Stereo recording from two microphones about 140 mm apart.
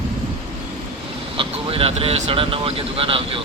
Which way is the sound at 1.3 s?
40° right (ahead or behind).